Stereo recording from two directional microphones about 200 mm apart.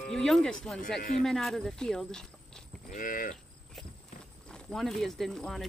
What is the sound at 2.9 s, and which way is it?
Livestock, 40° left (ahead or behind).